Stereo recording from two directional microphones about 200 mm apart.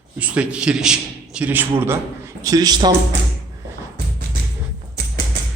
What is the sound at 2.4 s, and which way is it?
Speech, 20° right (ahead or behind).